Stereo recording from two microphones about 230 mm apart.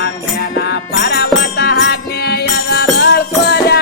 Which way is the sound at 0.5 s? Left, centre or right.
Left.